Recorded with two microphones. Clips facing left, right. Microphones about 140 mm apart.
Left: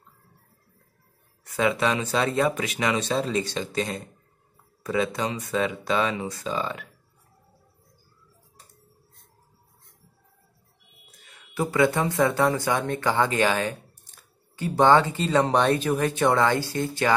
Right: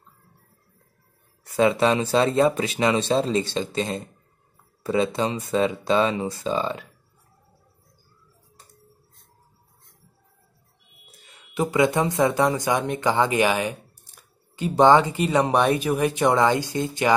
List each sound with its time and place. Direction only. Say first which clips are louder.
1.4 s speech: right 4 dB; 30° right (ahead or behind)
11.5 s speech: right 2 dB; 20° right (ahead or behind)